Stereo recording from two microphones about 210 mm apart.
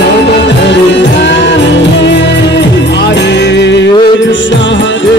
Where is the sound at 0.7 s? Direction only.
60° left (ahead or behind).